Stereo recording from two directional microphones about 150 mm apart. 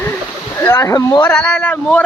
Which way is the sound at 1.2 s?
5° left (ahead or behind).